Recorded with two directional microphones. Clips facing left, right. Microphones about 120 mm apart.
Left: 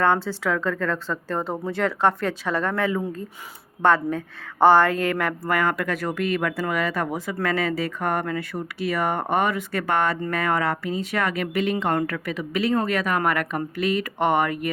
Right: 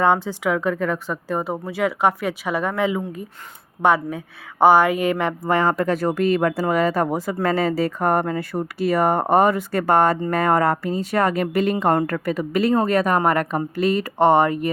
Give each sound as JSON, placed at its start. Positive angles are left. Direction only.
{"t": 0.0, "sound": "a woman's voice", "side_deg": -15}